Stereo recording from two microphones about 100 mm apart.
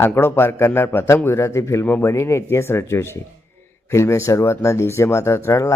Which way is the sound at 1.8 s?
15° left (ahead or behind).